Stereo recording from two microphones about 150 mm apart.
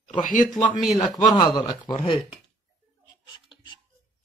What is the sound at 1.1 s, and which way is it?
Speech, 25° left (ahead or behind).